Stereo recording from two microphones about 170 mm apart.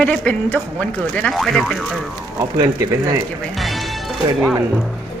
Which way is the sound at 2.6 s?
15° right (ahead or behind).